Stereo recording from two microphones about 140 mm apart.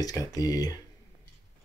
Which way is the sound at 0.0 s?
25° left (ahead or behind).